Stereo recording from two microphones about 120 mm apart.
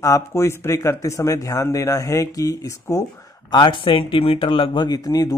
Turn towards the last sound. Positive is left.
turn(degrees=30)  # may be behind; listen again after turning